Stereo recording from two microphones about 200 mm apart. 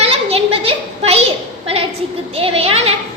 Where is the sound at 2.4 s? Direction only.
30° right (ahead or behind).